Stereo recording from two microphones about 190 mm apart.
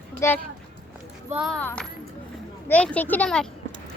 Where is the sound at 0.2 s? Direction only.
15° left (ahead or behind).